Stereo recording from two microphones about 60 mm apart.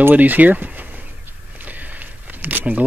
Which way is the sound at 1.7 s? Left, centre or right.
Right.